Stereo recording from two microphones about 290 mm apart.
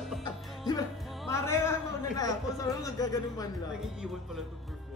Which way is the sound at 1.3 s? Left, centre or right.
Centre.